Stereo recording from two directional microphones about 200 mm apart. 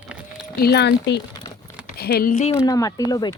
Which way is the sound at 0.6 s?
55° left (ahead or behind).